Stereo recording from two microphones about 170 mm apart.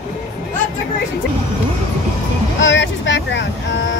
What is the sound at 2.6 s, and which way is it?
Vehicle, 90° left.